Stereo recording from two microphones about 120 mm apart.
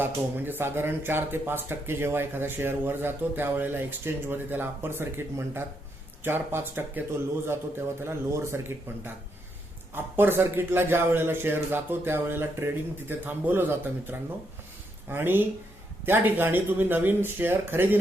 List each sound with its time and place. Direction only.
0.0 s a man's voice: 15° right (ahead or behind)
8.0 s a man's voice: 20° right (ahead or behind)
9.9 s a man's voice: 20° right (ahead or behind)